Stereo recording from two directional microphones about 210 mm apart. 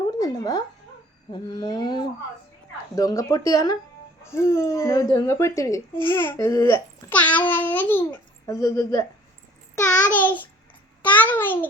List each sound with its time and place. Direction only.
0.2 s a sound: 20° left (ahead or behind)
1.3 s speech: 20° left (ahead or behind)
2.9 s babbling: 15° left (ahead or behind)
11.0 s a child's voice: 10° left (ahead or behind)